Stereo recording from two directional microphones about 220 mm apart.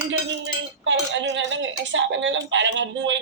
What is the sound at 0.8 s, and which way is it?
A woman's voice, 55° right (ahead or behind).